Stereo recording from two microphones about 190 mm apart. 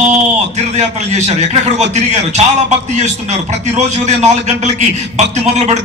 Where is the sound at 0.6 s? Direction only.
35° right (ahead or behind).